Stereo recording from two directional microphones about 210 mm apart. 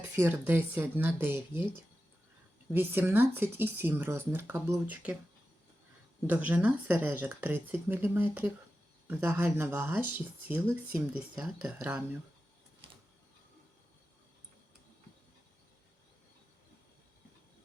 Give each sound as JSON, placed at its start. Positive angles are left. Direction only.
{"t": 0.2, "sound": "speech", "side_deg": -10}
{"t": 2.7, "sound": "speech", "side_deg": -10}
{"t": 6.2, "sound": "speech", "side_deg": -5}
{"t": 12.8, "sound": "a sound", "side_deg": -25}